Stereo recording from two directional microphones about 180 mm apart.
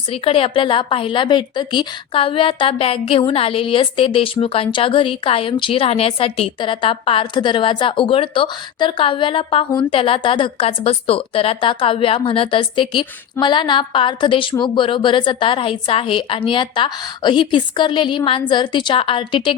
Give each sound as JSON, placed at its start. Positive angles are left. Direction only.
{"t": 0.1, "sound": "a woman's voice", "side_deg": 30}